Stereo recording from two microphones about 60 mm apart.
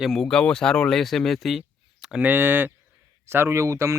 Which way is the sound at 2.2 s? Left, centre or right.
Right.